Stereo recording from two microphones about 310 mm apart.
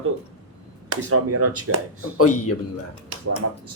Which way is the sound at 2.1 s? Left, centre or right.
Left.